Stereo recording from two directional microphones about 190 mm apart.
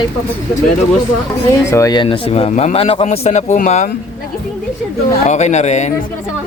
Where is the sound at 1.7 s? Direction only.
15° left (ahead or behind); by 3.9 s 40° left (ahead or behind).